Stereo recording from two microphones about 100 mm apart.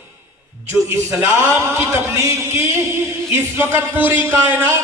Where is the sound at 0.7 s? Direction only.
25° right (ahead or behind).